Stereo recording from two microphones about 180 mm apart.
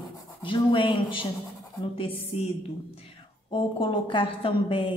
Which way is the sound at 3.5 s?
30° left (ahead or behind).